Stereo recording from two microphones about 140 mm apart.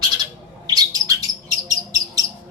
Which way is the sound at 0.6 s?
30° right (ahead or behind).